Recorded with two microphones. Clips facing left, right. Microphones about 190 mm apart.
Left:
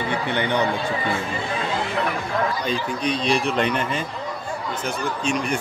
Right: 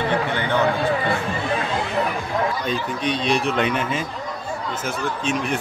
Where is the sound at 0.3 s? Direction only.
15° left (ahead or behind).